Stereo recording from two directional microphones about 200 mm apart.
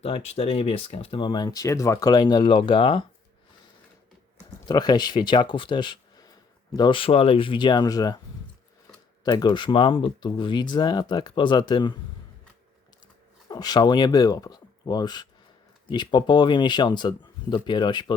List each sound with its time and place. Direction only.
0.0 s speech: 30° left (ahead or behind)
4.7 s speech: 20° left (ahead or behind)
9.2 s speech: 20° left (ahead or behind)
13.5 s speech: 20° left (ahead or behind)